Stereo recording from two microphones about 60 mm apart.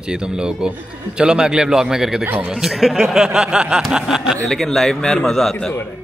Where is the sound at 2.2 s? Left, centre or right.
Right.